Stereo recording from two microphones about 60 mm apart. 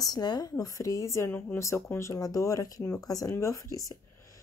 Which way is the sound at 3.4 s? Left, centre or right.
Left.